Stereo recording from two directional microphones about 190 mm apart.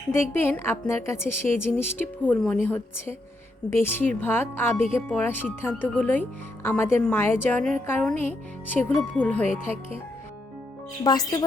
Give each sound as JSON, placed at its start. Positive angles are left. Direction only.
{"t": 0.1, "sound": "speech", "side_deg": 10}
{"t": 11.0, "sound": "speech", "side_deg": 20}